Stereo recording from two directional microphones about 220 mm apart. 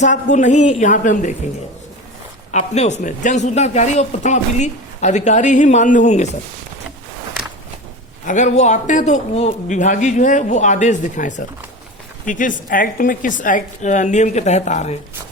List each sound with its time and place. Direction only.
0.0 s speech: 35° left (ahead or behind)
2.5 s speech: 30° left (ahead or behind)
8.3 s speech: 35° left (ahead or behind)